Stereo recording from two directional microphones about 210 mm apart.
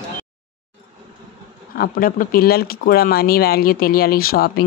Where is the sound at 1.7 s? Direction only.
45° left (ahead or behind).